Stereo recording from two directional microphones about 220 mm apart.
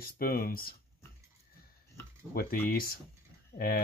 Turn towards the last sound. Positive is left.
turn(degrees=45)  # may be behind; listen again after turning